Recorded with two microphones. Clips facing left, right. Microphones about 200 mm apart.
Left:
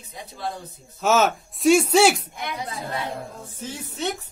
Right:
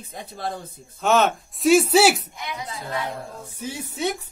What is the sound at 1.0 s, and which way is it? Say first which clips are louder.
Speech: even; centre (ahead or behind).